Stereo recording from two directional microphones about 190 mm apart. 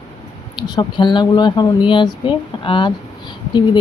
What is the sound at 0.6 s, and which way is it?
Speech, 20° left (ahead or behind).